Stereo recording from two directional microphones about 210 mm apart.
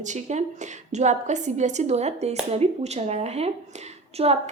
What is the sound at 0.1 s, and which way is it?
A woman's voice, 35° right (ahead or behind).